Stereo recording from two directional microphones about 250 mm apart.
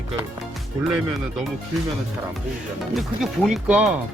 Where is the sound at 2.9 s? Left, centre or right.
Centre.